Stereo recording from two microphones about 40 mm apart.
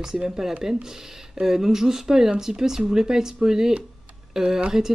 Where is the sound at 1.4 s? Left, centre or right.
Centre.